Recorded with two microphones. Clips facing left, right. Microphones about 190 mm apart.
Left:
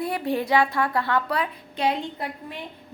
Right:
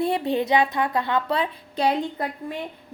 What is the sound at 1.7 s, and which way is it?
Speech, 35° right (ahead or behind).